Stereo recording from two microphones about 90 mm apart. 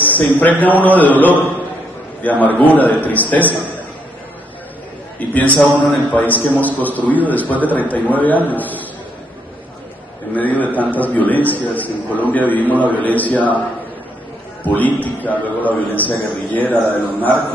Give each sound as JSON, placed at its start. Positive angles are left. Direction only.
{"t": 0.0, "sound": "a man's voice", "side_deg": 20}
{"t": 5.3, "sound": "a man's voice", "side_deg": 15}
{"t": 10.3, "sound": "a man's voice", "side_deg": 20}
{"t": 14.6, "sound": "a man's voice", "side_deg": 20}